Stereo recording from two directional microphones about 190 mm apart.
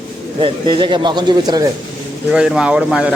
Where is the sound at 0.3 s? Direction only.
25° right (ahead or behind).